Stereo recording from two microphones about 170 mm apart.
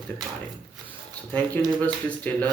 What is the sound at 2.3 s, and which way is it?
Speech, 10° left (ahead or behind).